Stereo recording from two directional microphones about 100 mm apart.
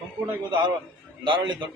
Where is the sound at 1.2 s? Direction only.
50° right (ahead or behind).